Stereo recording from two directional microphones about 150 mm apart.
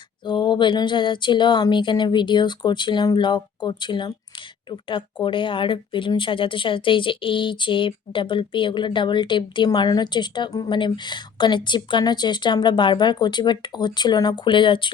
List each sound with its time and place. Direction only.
0.3 s speech: 30° left (ahead or behind)